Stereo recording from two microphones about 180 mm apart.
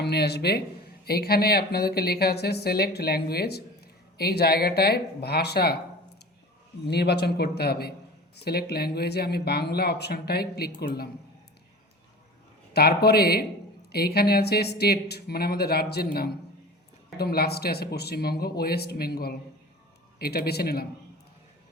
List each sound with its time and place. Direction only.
0.0 s speech: 65° left (ahead or behind)
6.8 s speech: 65° left (ahead or behind)
12.7 s speech: 60° left (ahead or behind)
17.2 s speech: 60° left (ahead or behind)